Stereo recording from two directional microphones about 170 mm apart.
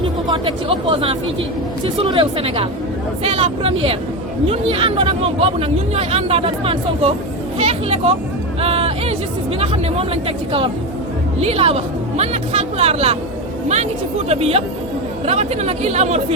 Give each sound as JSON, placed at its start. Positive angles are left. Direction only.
{"t": 0.3, "sound": "speech", "side_deg": -30}
{"t": 14.3, "sound": "speech", "side_deg": -35}